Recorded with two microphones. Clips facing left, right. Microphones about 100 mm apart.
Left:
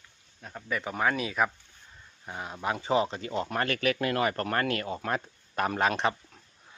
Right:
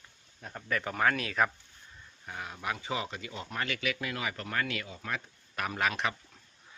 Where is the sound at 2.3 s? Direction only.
25° left (ahead or behind); by 5.2 s 55° left (ahead or behind).